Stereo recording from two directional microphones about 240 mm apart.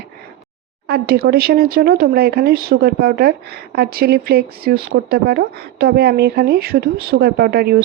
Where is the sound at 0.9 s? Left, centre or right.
Right.